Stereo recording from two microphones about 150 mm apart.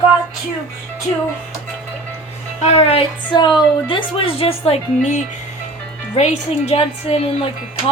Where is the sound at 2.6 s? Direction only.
40° left (ahead or behind).